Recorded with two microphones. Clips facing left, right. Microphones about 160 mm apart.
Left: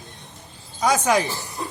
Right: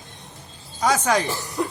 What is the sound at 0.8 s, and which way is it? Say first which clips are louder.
Speech: left 1 dB; 10° left (ahead or behind).